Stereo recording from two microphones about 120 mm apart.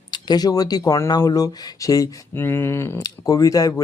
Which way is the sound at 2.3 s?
20° left (ahead or behind).